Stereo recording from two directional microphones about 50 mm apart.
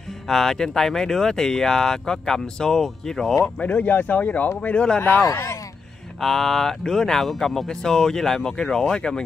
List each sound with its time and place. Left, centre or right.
0.3 s speech: centre
3.6 s speech: left
6.2 s speech: centre